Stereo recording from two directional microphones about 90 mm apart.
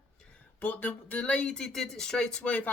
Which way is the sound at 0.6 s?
20° left (ahead or behind).